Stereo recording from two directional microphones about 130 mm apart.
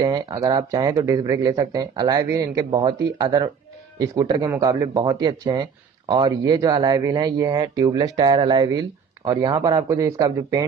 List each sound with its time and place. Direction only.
0.0 s speech: 30° right (ahead or behind)